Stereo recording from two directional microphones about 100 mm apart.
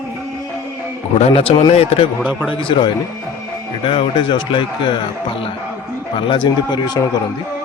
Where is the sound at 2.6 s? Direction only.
55° left (ahead or behind).